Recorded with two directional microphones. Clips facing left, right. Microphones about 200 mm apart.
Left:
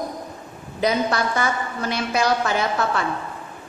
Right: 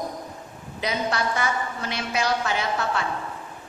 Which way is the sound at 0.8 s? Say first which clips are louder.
Left 5 dB; 40° left (ahead or behind).